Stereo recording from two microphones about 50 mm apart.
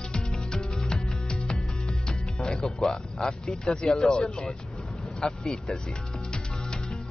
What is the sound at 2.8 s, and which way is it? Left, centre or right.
Speech, centre.